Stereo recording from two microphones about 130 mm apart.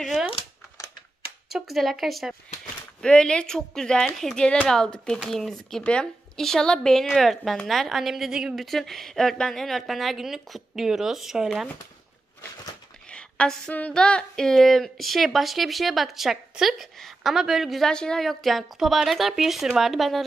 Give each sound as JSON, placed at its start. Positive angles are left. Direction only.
{"t": 0.0, "sound": "a sound", "side_deg": 0}
{"t": 1.5, "sound": "a woman's voice", "side_deg": 0}
{"t": 13.1, "sound": "a woman's voice", "side_deg": 10}